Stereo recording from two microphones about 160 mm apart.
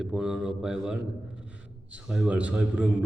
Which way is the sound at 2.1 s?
5° right (ahead or behind).